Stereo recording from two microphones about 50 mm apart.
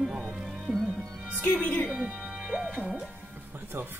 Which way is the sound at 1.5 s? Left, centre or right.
Left.